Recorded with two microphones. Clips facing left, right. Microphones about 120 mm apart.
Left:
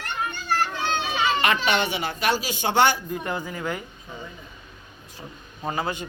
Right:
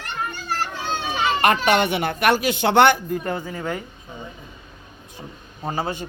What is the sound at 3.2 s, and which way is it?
Speech, 35° right (ahead or behind).